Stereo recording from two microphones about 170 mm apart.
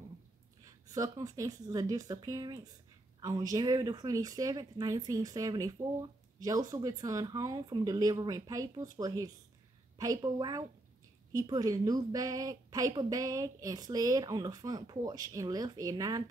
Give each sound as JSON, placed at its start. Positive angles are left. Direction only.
{"t": 0.7, "sound": "a woman's voice", "side_deg": -20}